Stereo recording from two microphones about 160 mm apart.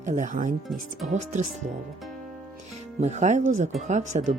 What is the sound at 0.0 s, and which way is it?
Speech, 50° right (ahead or behind).